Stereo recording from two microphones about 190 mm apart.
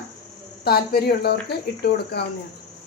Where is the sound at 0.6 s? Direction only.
55° left (ahead or behind).